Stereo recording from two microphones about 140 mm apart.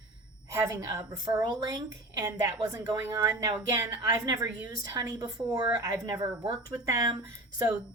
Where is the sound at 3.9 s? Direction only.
30° right (ahead or behind).